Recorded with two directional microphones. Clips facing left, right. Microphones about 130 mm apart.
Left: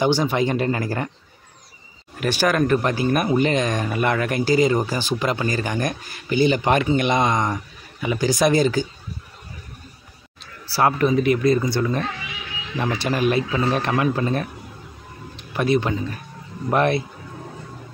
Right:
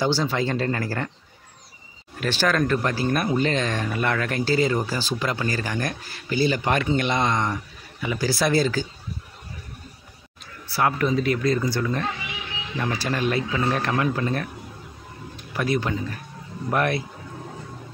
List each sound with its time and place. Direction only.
0.0 s speech: 15° left (ahead or behind)
2.1 s speech: 15° left (ahead or behind)
10.7 s speech: 30° left (ahead or behind)
11.1 s a man's voice: 20° left (ahead or behind)